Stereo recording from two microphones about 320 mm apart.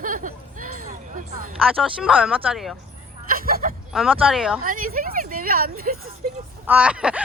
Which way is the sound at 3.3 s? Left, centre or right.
Right.